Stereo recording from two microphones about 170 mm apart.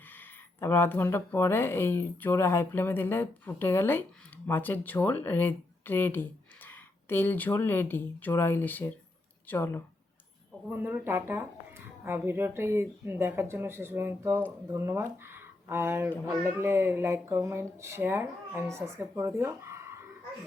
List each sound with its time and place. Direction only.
0.1 s speech: 10° left (ahead or behind)
10.7 s speech: 10° right (ahead or behind)